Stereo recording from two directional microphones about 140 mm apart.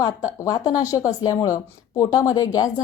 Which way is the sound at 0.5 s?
25° left (ahead or behind).